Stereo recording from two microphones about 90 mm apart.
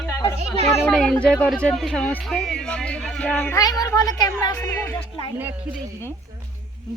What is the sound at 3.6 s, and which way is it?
Speech, 45° left (ahead or behind).